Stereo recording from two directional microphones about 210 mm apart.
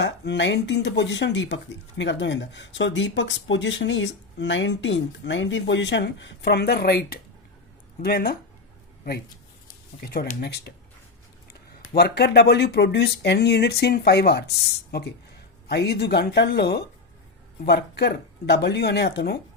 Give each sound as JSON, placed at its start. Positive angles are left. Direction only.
{"t": 0.0, "sound": "speech", "side_deg": 60}
{"t": 10.1, "sound": "speech", "side_deg": 45}
{"t": 11.9, "sound": "speech", "side_deg": 50}
{"t": 15.6, "sound": "speech", "side_deg": 50}